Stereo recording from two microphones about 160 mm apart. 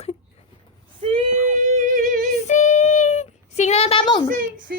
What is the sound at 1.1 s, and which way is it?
Female singing, 50° right (ahead or behind).